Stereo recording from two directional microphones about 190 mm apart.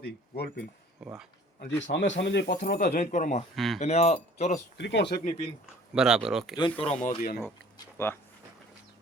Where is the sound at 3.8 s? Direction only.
35° left (ahead or behind).